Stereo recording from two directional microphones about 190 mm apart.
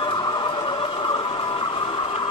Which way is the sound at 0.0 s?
25° left (ahead or behind).